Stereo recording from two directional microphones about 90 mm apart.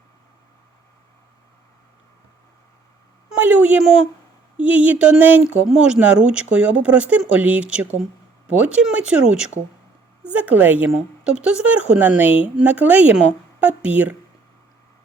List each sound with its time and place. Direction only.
3.3 s a woman's voice: 20° right (ahead or behind)
10.3 s a woman's voice: 20° right (ahead or behind)